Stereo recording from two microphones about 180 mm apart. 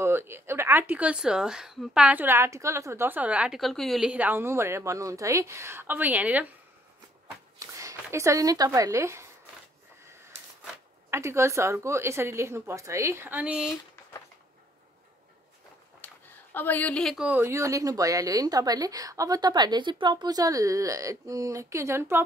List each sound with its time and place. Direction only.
0.0 s speech: 15° right (ahead or behind)
11.1 s speech: 15° right (ahead or behind)
16.0 s a sound: 10° left (ahead or behind)
16.5 s a woman's voice: 10° left (ahead or behind); by 22.2 s 15° right (ahead or behind)